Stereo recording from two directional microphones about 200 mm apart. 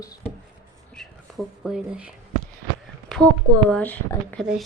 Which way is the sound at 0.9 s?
Centre (ahead or behind).